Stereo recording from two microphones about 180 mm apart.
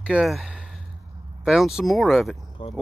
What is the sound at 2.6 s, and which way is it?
Speech, 30° left (ahead or behind).